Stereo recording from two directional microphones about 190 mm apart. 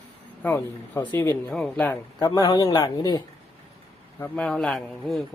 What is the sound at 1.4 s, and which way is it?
Speech, 5° left (ahead or behind).